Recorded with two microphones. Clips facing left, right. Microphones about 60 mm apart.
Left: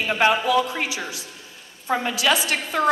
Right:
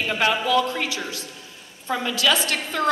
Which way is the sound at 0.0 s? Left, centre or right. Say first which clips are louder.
Left 3 dB; left.